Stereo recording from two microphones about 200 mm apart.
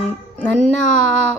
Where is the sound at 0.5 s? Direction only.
35° left (ahead or behind).